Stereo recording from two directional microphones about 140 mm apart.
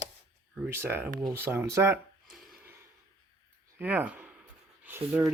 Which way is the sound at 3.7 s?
10° right (ahead or behind).